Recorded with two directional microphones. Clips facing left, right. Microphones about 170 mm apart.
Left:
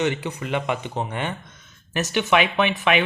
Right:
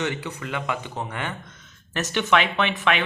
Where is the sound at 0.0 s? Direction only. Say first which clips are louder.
Left 4 dB; 20° left (ahead or behind).